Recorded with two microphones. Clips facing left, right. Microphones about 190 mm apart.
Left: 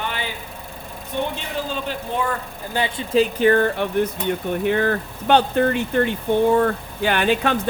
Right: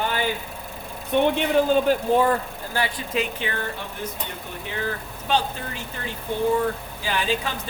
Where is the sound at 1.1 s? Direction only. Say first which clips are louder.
Right 7 dB; 55° right (ahead or behind).